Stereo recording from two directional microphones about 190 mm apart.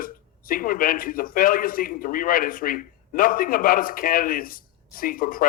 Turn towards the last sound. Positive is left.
turn(degrees=50)  # may be behind; listen again after turning